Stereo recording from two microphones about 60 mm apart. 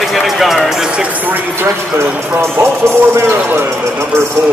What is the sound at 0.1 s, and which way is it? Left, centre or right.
Music, centre.